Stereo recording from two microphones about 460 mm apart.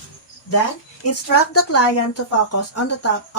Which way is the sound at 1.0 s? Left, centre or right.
Left.